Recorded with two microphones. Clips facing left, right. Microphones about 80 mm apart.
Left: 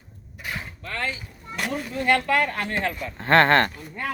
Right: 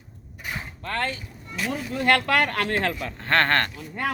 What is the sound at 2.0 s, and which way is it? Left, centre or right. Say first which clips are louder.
A woman's voice: even; right.